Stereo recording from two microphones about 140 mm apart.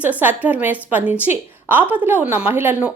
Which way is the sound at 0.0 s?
10° right (ahead or behind).